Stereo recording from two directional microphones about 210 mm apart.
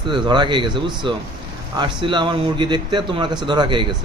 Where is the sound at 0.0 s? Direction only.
20° right (ahead or behind).